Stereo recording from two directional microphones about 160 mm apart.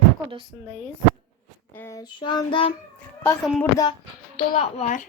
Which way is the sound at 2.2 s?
30° left (ahead or behind).